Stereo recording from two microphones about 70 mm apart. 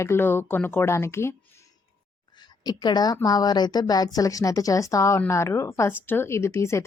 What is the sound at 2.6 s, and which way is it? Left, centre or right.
A woman's voice, left.